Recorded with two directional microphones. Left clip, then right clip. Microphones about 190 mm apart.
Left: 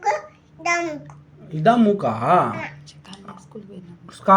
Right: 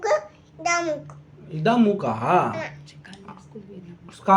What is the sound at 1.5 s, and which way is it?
Speech, 15° left (ahead or behind).